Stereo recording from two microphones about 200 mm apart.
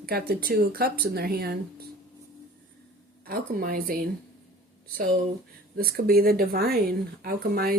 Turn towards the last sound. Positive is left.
turn(degrees=-50)  # may be behind; listen again after turning